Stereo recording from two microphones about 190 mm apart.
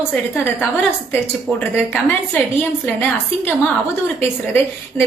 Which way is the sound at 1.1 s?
10° left (ahead or behind).